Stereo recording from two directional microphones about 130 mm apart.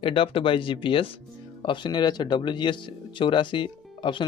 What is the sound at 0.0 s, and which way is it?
Speech, 45° left (ahead or behind).